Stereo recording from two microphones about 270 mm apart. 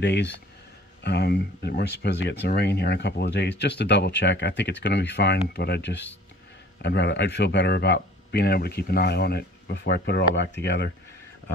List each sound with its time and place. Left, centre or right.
0.0 s speech: left